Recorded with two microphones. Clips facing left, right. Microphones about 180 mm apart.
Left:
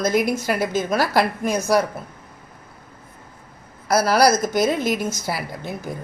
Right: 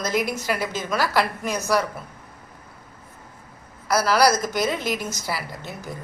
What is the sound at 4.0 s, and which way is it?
A woman's voice, 50° left (ahead or behind).